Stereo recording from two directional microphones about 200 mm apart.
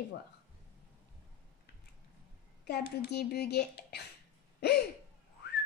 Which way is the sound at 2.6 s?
55° left (ahead or behind).